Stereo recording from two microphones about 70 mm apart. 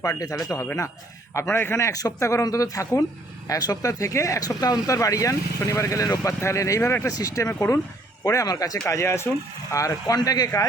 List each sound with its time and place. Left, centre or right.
0.0 s speech: left
2.1 s speech: left
4.9 s speech: left
7.1 s speech: left
7.6 s speech: left
8.2 s speech: left
8.9 s speech: left
9.7 s speech: left
10.2 s speech: left